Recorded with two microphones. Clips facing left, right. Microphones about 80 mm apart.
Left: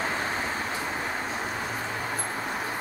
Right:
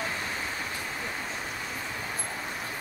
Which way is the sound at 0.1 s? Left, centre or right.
Left.